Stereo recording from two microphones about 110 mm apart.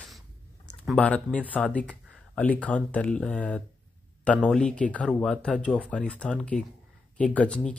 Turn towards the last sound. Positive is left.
turn(degrees=10)  # may be behind; listen again after turning